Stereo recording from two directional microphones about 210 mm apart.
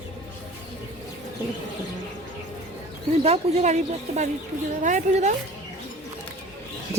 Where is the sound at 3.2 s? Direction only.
30° right (ahead or behind).